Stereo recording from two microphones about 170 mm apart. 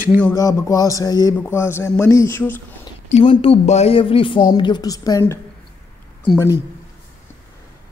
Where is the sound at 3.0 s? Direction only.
40° left (ahead or behind); by 5.3 s 20° left (ahead or behind).